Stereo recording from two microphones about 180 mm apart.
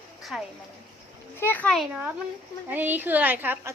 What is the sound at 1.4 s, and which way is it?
A woman's voice, 10° left (ahead or behind).